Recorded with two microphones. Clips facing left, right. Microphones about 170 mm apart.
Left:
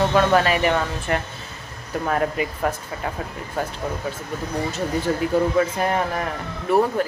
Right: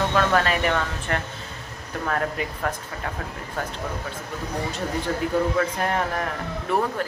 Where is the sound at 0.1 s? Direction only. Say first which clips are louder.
Left 4 dB; 15° left (ahead or behind).